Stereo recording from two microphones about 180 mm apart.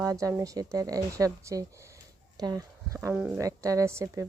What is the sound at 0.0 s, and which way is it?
Speech, 15° right (ahead or behind).